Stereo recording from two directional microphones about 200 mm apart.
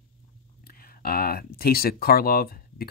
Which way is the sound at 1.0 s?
50° left (ahead or behind).